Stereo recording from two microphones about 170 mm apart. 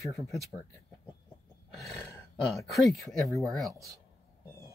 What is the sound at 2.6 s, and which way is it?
Speech, centre (ahead or behind).